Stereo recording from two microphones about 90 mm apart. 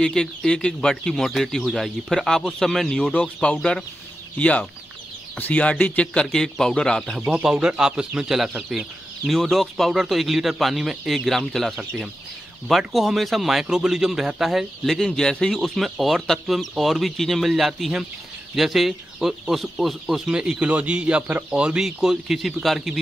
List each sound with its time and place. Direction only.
0.0 s speech: 5° left (ahead or behind)
6.2 s speech: 5° left (ahead or behind)
7.3 s speech: 5° right (ahead or behind)